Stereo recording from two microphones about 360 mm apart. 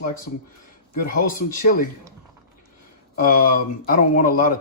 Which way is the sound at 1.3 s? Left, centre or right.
Left.